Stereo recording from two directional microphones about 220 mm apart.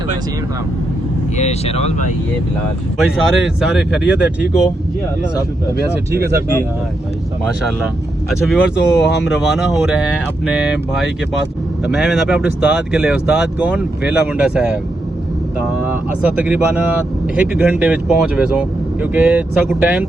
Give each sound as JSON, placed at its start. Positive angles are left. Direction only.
{"t": 1.4, "sound": "speech", "side_deg": 30}
{"t": 3.0, "sound": "speech", "side_deg": -5}
{"t": 6.1, "sound": "speech", "side_deg": -45}
{"t": 8.4, "sound": "speech", "side_deg": -5}
{"t": 9.0, "sound": "speech", "side_deg": 50}
{"t": 9.4, "sound": "speech", "side_deg": 0}